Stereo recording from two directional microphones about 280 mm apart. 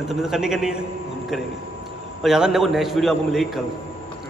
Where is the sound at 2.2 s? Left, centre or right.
Centre.